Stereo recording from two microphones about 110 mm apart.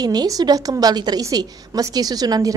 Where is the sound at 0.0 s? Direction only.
35° right (ahead or behind).